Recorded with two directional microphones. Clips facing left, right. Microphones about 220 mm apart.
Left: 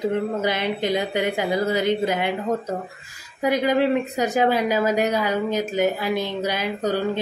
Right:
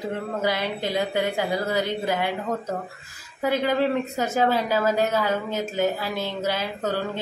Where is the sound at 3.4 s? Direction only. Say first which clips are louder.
Left 3 dB; 15° left (ahead or behind).